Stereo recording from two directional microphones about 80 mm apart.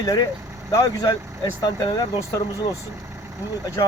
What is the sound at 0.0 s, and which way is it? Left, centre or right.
Speech, left.